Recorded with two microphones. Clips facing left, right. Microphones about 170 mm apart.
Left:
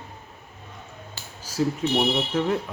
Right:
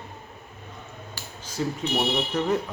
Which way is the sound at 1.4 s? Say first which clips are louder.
Left 4 dB; 5° left (ahead or behind).